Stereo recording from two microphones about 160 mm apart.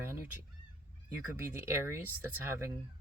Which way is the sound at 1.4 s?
15° right (ahead or behind).